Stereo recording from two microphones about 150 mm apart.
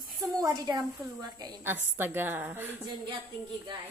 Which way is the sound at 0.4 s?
25° right (ahead or behind).